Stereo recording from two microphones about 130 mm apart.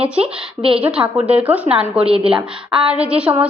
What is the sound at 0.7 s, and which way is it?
A woman's voice, 10° right (ahead or behind).